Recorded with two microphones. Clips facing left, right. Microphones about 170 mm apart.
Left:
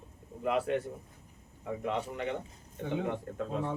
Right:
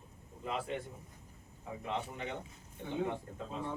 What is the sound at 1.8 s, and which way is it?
Speech, 65° left (ahead or behind).